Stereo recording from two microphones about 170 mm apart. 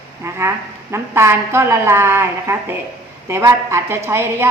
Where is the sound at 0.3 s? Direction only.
15° right (ahead or behind).